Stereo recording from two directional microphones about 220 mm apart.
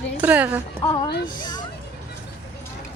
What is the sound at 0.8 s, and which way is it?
Speech, 20° left (ahead or behind).